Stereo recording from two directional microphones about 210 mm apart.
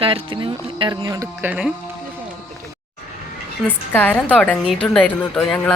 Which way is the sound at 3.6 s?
10° left (ahead or behind).